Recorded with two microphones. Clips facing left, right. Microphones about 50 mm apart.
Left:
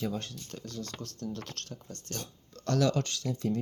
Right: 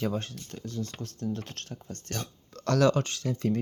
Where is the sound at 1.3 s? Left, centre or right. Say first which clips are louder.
Right 3 dB; right.